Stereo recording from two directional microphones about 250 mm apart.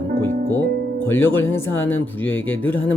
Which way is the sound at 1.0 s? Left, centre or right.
Centre.